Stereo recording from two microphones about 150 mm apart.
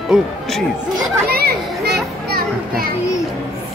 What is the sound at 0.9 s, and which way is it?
Children playing, 90° right.